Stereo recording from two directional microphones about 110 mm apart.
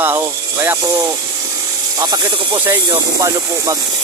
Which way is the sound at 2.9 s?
35° right (ahead or behind).